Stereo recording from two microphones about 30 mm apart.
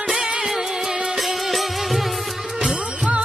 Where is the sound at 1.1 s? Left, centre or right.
Centre.